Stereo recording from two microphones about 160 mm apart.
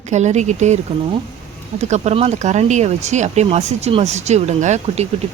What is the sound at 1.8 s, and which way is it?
Speech, 45° right (ahead or behind).